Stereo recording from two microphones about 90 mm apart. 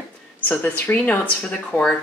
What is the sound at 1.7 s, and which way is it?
Speech, 30° left (ahead or behind).